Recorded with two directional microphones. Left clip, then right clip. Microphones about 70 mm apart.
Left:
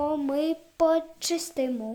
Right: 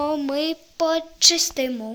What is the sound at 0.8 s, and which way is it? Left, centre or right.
Speech, left.